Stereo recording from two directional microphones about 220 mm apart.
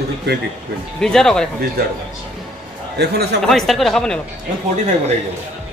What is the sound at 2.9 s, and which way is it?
Speech, 50° right (ahead or behind).